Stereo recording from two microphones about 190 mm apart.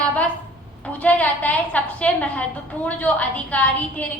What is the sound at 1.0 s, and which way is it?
A woman's voice, 5° left (ahead or behind).